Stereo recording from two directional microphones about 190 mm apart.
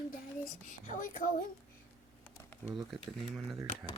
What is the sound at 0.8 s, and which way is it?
Speech, 45° left (ahead or behind).